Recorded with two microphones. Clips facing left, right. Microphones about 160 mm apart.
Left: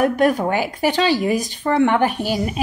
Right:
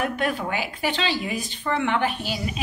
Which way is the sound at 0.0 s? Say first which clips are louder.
Left 9 dB; 40° left (ahead or behind).